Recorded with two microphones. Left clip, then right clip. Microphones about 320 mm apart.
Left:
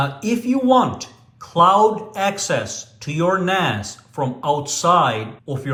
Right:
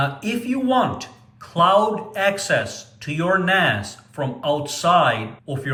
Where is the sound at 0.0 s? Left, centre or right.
Centre.